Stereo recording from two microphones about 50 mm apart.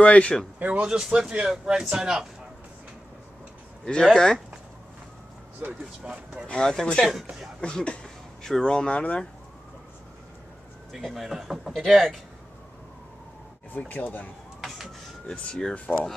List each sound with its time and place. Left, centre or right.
0.0 s speech: left
0.7 s speech: right
0.9 s speech: centre
3.8 s speech: centre
5.6 s speech: right
6.4 s speech: centre
10.9 s speech: centre
13.7 s speech: left
15.2 s speech: centre